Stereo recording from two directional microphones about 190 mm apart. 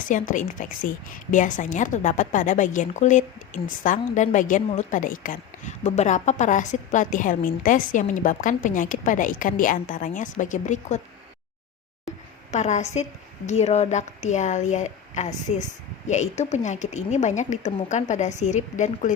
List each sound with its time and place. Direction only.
0.1 s a woman's voice: 45° left (ahead or behind)
12.5 s a woman's voice: 35° left (ahead or behind)